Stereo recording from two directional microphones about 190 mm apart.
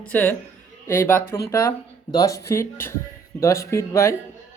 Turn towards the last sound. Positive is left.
turn(degrees=15)  # may be behind; listen again after turning